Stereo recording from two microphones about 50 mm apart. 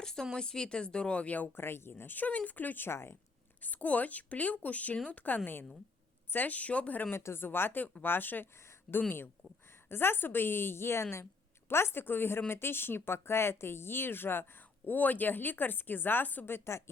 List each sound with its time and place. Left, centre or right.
0.0 s speech: centre; by 1.5 s left
1.5 s speech: left
2.9 s a woman's voice: left
3.6 s speech: left
7.1 s speech: left
14.8 s speech: left
16.5 s a woman's voice: left